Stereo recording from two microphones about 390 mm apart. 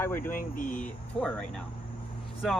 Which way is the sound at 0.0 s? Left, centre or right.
Centre.